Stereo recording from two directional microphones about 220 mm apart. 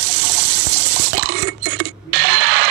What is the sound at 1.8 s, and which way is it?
Mechanisms, 50° right (ahead or behind).